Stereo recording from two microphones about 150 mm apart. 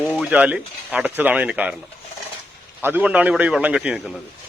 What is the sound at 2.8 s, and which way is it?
Speech, 10° right (ahead or behind).